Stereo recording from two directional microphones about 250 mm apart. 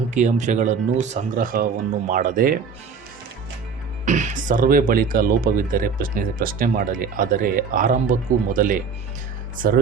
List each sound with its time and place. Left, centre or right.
0.1 s speech: right
4.0 s speech: right